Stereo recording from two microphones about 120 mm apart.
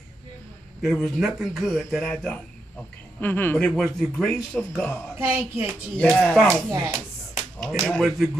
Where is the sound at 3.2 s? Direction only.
15° left (ahead or behind).